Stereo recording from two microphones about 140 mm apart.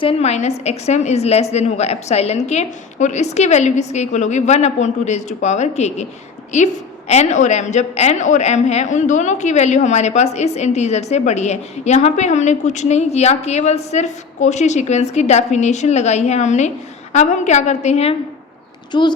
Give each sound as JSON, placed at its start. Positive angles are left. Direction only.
{"t": 0.0, "sound": "a woman's voice", "side_deg": 45}
{"t": 7.1, "sound": "a woman's voice", "side_deg": 55}
{"t": 18.9, "sound": "speech", "side_deg": 35}